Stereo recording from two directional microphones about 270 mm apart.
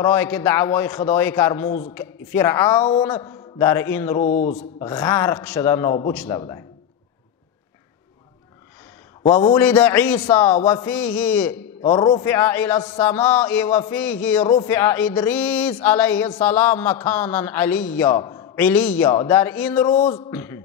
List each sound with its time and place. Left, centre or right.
0.0 s speech: centre
4.2 s a sound: left
4.7 s speech: centre
6.1 s a man's voice: centre
9.2 s speech: centre
11.8 s speech: centre